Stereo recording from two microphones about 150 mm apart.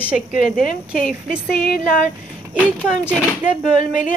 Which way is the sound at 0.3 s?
65° left (ahead or behind).